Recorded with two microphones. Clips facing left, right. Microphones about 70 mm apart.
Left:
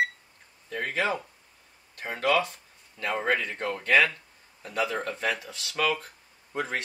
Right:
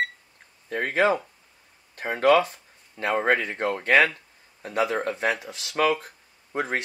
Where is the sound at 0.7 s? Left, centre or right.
Right.